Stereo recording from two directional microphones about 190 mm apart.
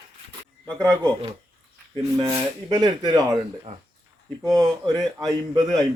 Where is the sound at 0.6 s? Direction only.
20° right (ahead or behind).